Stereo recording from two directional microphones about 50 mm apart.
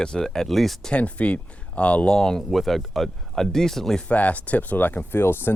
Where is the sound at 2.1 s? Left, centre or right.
Centre.